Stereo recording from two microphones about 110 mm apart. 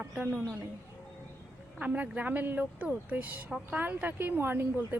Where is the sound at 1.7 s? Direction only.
15° right (ahead or behind).